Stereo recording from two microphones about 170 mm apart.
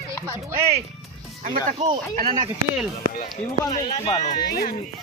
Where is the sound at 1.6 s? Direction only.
35° right (ahead or behind).